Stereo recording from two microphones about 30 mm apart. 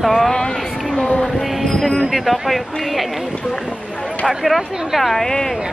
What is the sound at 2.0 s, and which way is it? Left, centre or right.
Speech, centre.